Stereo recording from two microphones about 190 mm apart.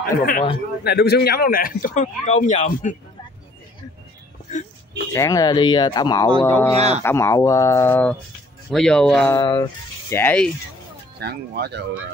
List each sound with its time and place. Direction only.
0.0 s speech: 50° left (ahead or behind)
5.1 s speech: 15° left (ahead or behind)
6.4 s speech: 10° left (ahead or behind)
9.3 s speech: 25° left (ahead or behind)
10.0 s speech: 10° left (ahead or behind)
11.1 s speech: 55° right (ahead or behind)